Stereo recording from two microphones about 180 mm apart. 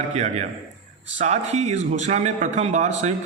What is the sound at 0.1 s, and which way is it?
A man's voice, 40° right (ahead or behind).